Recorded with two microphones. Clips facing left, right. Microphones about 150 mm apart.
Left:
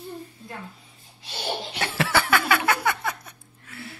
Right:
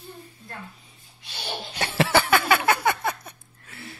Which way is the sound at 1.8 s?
25° right (ahead or behind).